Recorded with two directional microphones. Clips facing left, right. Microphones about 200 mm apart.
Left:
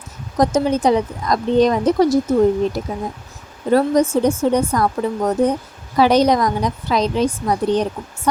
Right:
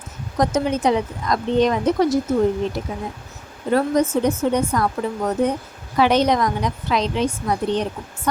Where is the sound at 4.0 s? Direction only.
10° left (ahead or behind).